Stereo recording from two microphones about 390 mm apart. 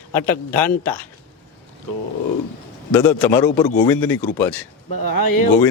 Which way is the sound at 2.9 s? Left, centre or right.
Centre.